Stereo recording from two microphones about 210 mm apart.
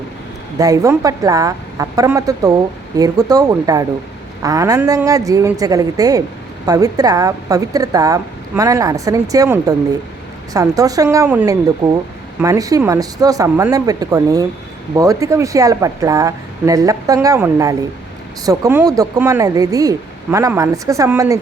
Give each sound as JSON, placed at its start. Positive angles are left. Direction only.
{"t": 0.6, "sound": "speech", "side_deg": -15}
{"t": 11.8, "sound": "speech", "side_deg": -25}